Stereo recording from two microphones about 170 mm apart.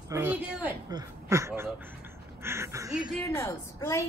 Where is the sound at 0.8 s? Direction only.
20° right (ahead or behind).